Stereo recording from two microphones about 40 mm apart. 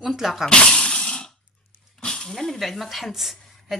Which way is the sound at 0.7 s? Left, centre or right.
Centre.